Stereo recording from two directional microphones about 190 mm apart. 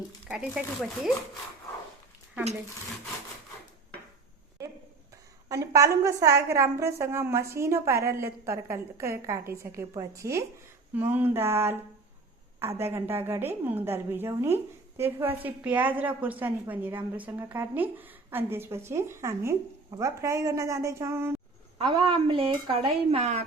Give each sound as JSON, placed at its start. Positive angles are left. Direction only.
{"t": 0.3, "sound": "speech", "side_deg": -5}
{"t": 5.5, "sound": "a woman's voice", "side_deg": -15}
{"t": 21.8, "sound": "speech", "side_deg": -25}